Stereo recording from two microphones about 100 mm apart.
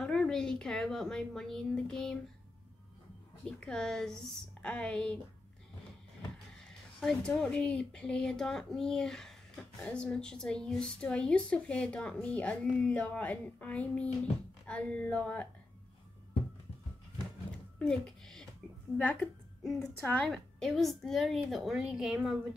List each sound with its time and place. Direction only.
0.0 s speech: 5° left (ahead or behind)
3.4 s a woman's voice: 10° left (ahead or behind)
7.0 s a woman's voice: 5° left (ahead or behind)
17.7 s a sound: 5° left (ahead or behind)
18.9 s a woman's voice: 15° left (ahead or behind)
19.6 s speech: 5° left (ahead or behind)